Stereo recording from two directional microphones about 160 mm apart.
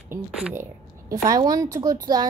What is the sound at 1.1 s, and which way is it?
Speech, 25° right (ahead or behind).